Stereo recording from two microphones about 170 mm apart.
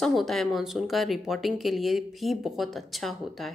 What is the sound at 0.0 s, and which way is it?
A woman's voice, centre (ahead or behind).